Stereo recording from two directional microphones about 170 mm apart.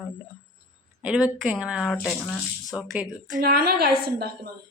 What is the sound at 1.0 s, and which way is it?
Speech, 5° right (ahead or behind).